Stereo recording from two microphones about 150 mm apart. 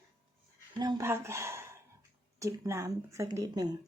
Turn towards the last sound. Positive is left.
turn(degrees=-25)  # may be behind; listen again after turning